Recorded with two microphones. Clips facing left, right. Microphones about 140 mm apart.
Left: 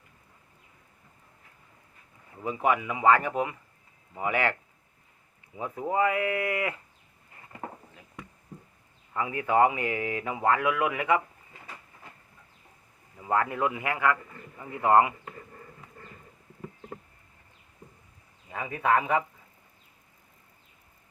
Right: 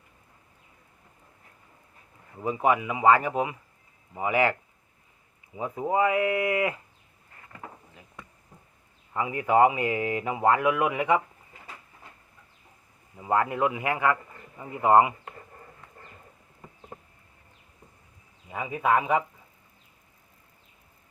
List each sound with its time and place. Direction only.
2.4 s speech: 20° right (ahead or behind)
5.5 s speech: 20° right (ahead or behind)
9.1 s speech: 15° right (ahead or behind)
13.1 s speech: 15° right (ahead or behind)
18.5 s speech: 15° right (ahead or behind)